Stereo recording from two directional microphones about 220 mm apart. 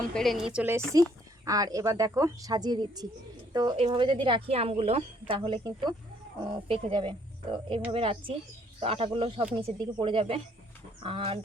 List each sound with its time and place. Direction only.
0.1 s a woman's voice: centre (ahead or behind); by 11.3 s 25° right (ahead or behind)